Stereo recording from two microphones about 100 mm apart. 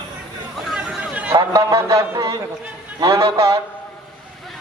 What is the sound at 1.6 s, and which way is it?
A man's voice, 30° right (ahead or behind).